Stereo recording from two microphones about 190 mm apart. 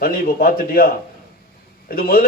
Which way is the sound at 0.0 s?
50° left (ahead or behind).